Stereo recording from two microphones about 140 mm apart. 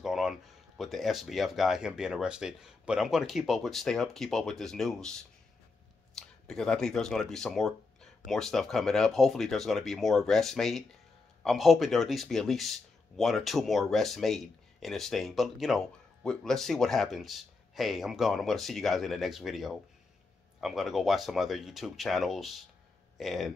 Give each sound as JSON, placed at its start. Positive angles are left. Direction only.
{"t": 0.0, "sound": "speech", "side_deg": -5}
{"t": 6.1, "sound": "speech", "side_deg": 5}